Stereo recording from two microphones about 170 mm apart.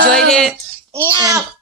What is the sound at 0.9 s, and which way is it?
Speech, 20° right (ahead or behind).